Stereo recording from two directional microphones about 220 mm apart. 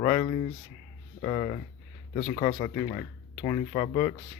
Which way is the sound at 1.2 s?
20° left (ahead or behind).